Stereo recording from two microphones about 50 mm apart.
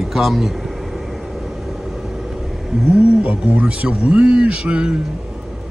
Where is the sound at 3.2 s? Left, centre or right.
Right.